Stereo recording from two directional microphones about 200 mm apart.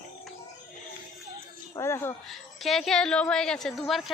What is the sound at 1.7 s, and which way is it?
Speech, 15° left (ahead or behind).